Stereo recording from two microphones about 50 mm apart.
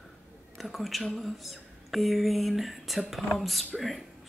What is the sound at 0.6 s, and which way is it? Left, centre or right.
Music, centre.